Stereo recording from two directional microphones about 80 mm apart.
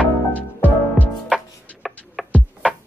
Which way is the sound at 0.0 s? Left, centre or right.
Centre.